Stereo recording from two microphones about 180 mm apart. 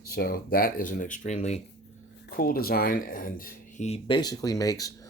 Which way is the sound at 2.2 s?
55° left (ahead or behind).